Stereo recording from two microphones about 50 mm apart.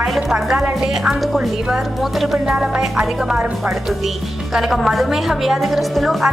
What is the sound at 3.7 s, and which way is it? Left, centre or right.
A woman's voice, centre.